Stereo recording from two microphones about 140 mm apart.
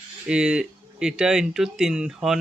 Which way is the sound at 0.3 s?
5° right (ahead or behind).